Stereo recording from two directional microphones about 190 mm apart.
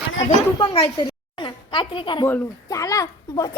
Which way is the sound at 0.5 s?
25° left (ahead or behind).